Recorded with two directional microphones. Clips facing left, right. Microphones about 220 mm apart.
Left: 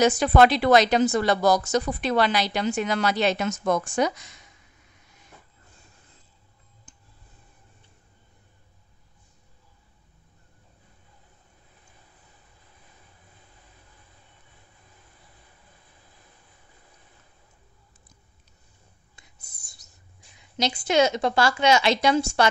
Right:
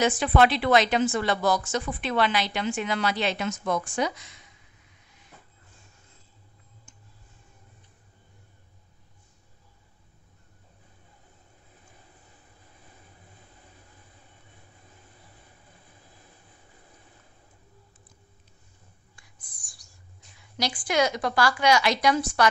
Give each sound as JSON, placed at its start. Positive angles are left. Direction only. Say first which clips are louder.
{"t": 0.0, "sound": "a woman's voice", "louder": "left 3 dB", "side_deg": 40}
{"t": 6.9, "sound": "tick", "louder": "left 4 dB", "side_deg": 35}
{"t": 19.1, "sound": "a sound", "louder": "even", "side_deg": 25}
{"t": 20.2, "sound": "a woman's voice", "louder": "left 3 dB", "side_deg": 20}